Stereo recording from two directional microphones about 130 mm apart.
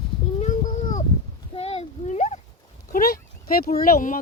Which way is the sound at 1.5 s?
50° left (ahead or behind).